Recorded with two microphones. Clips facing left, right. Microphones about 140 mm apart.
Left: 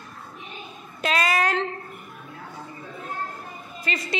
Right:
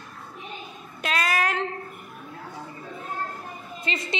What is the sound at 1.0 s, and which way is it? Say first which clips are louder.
Speech: left 3 dB; centre (ahead or behind).